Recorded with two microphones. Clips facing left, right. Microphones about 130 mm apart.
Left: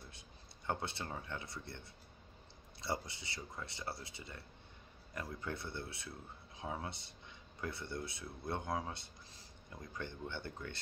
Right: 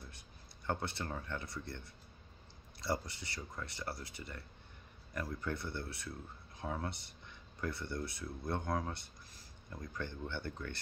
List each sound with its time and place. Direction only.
0.8 s speech: 20° left (ahead or behind)
2.8 s speech: 20° left (ahead or behind)